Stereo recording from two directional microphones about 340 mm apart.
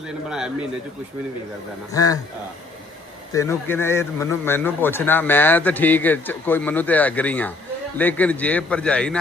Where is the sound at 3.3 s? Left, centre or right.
Centre.